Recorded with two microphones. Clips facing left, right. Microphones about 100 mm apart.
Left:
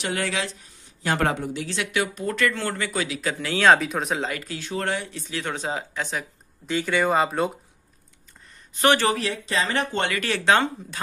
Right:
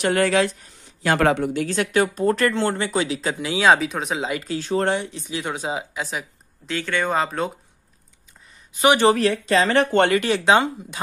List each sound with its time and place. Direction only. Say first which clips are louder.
0.0 s speech: right 8 dB; 50° right (ahead or behind)
1.0 s speech: right 5 dB; 90° right; by 1.6 s 75° right (ahead or behind)
1.6 s speech: right 6 dB; 40° right (ahead or behind)
2.5 s speech: right 5 dB; 25° right (ahead or behind)
3.3 s speech: even; 10° right (ahead or behind)
4.3 s speech: right 7 dB; 25° right (ahead or behind); by 6.2 s 5° right (ahead or behind)
6.7 s speech: left 1 dB; 10° left (ahead or behind)
8.7 s speech: right 2 dB; 10° right (ahead or behind)
9.1 s speech: right 7 dB; 50° right (ahead or behind)
9.7 s speech: right 8 dB; 60° right (ahead or behind)
10.2 s speech: right 3 dB; 15° right (ahead or behind)